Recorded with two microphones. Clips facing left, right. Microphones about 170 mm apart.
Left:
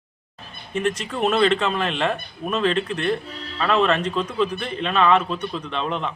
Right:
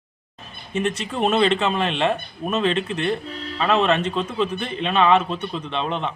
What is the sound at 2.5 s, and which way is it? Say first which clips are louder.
Speech: even; 5° right (ahead or behind).